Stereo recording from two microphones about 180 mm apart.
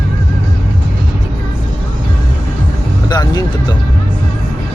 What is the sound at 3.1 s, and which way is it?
Music, 20° left (ahead or behind).